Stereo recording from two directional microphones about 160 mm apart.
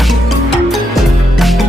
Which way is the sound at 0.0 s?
Centre (ahead or behind).